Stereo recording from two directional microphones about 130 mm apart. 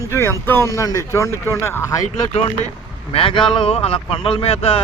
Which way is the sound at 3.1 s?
45° left (ahead or behind).